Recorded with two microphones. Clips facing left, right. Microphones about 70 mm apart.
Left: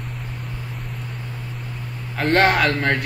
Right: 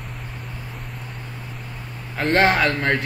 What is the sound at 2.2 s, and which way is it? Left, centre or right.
Speech, centre.